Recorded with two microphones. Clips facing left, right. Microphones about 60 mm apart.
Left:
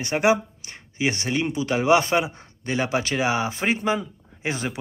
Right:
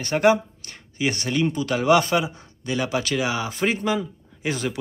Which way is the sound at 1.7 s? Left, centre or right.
Left.